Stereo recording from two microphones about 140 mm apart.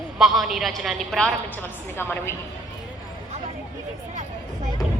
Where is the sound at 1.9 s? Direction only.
15° left (ahead or behind).